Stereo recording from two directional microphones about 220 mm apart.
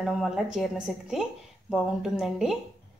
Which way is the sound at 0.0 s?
Centre (ahead or behind).